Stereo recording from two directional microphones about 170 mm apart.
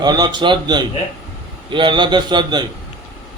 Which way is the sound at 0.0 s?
25° right (ahead or behind).